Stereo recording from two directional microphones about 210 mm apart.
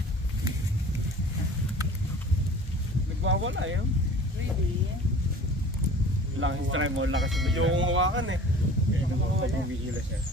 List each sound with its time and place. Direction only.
3.3 s speech: 65° right (ahead or behind)
6.4 s speech: 70° right (ahead or behind)
7.2 s speech: centre (ahead or behind)
7.5 s speech: 70° right (ahead or behind)